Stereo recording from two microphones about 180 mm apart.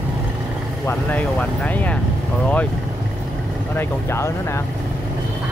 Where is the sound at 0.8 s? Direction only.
10° left (ahead or behind).